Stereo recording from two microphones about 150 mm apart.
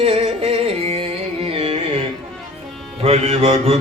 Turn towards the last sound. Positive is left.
turn(degrees=-40)  # may be behind; listen again after turning